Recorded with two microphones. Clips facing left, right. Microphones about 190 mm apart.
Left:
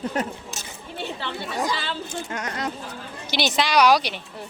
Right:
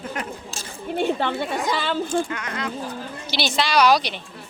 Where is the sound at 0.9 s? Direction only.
50° right (ahead or behind).